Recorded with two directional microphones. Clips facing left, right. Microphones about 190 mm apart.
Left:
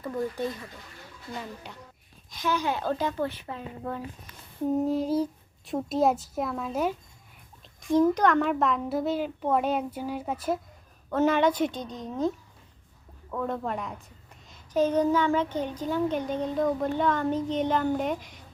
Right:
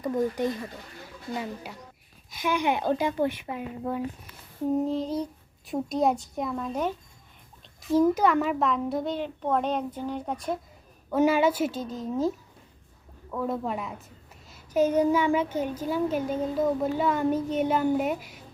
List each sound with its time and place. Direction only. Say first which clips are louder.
0.0 s a child's voice: right 4 dB; 15° right (ahead or behind)
4.9 s a child's voice: left 3 dB; 5° left (ahead or behind)
7.6 s a child's voice: even; 5° right (ahead or behind)
11.1 s a child's voice: right 1 dB; 10° right (ahead or behind)
13.3 s a child's voice: right 1 dB; 5° right (ahead or behind)